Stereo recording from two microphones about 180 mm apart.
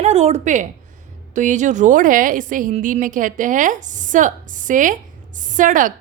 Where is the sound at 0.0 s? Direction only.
40° right (ahead or behind).